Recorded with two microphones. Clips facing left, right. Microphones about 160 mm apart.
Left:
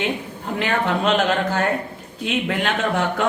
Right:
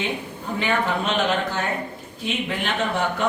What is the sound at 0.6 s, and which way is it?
Speech, 80° left.